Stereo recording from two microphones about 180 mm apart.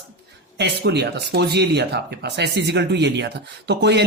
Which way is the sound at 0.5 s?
65° right (ahead or behind).